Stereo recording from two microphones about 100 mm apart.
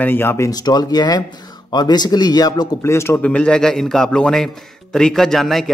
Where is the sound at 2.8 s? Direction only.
25° left (ahead or behind).